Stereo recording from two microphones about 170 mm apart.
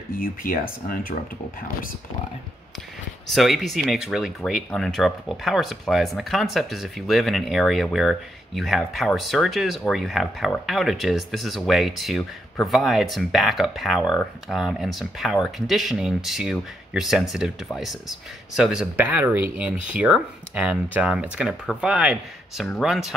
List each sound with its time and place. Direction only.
0.1 s speech: 60° left (ahead or behind)
3.3 s speech: centre (ahead or behind)